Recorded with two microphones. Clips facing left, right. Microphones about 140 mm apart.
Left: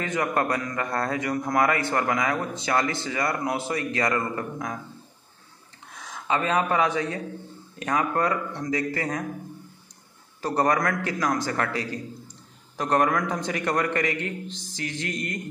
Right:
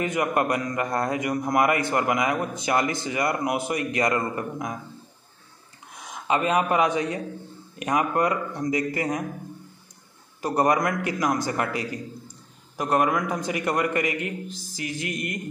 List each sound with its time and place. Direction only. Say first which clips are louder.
0.0 s a man's voice: right 2 dB; 15° right (ahead or behind)
5.9 s a man's voice: right 2 dB; 15° right (ahead or behind)
10.4 s a man's voice: right 1 dB; 15° right (ahead or behind)